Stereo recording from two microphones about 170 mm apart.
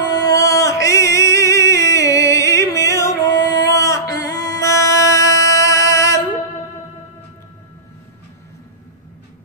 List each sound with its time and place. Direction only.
0.1 s music: 20° left (ahead or behind)